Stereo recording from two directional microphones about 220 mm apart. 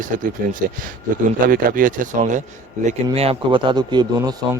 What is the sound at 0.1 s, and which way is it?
Speech, 40° right (ahead or behind).